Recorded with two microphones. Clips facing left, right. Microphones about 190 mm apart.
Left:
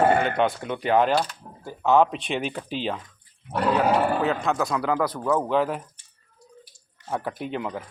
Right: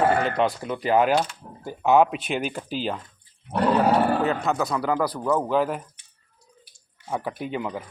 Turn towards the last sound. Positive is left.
turn(degrees=0)  # may be behind; listen again after turning